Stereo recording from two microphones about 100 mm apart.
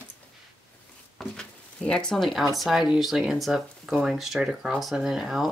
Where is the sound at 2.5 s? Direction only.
Centre (ahead or behind).